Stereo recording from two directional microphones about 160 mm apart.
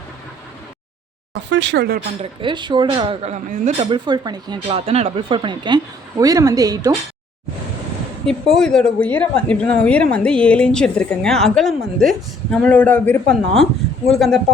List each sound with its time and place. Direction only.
1.3 s speech: 90° right
2.4 s speech: 30° right (ahead or behind)
4.9 s speech: 40° right (ahead or behind); by 6.9 s 25° right (ahead or behind)
8.3 s a woman's voice: 5° left (ahead or behind)